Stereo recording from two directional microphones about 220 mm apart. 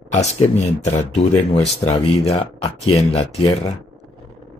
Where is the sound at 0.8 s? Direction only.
30° left (ahead or behind).